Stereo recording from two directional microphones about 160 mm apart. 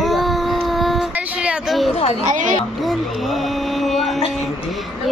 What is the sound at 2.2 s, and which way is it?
Speech, 55° right (ahead or behind).